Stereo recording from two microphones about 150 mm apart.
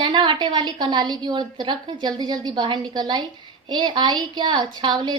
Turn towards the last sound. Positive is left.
turn(degrees=-30)  # may be behind; listen again after turning